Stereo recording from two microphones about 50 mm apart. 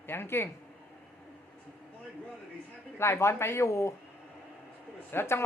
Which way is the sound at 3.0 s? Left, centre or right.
Left.